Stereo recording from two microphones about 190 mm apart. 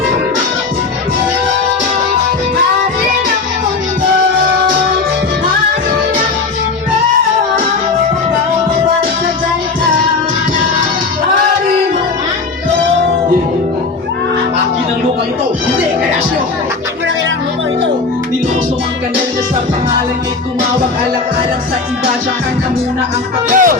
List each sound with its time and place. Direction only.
23.5 s music: 45° right (ahead or behind)